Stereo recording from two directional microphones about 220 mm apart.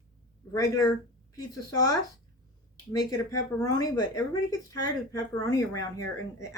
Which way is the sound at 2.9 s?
15° left (ahead or behind).